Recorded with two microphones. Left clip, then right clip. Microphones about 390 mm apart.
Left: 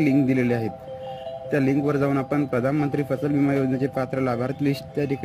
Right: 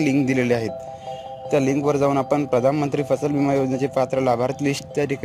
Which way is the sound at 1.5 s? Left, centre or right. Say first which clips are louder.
Right 3 dB; right.